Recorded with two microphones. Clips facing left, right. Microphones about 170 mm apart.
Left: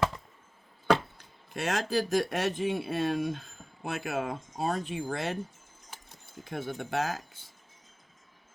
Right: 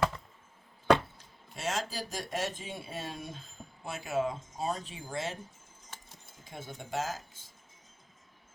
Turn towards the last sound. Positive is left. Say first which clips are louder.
# left 4 dB
turn(degrees=60)  # may be behind; listen again after turning